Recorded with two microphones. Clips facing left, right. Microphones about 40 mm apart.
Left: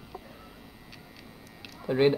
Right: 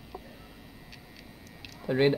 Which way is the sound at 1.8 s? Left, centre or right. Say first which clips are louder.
Left 1 dB; centre.